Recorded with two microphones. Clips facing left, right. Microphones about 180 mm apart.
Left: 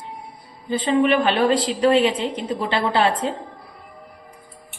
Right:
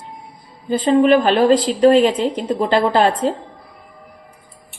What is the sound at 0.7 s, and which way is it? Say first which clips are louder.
A woman's voice: right 5 dB; 40° right (ahead or behind).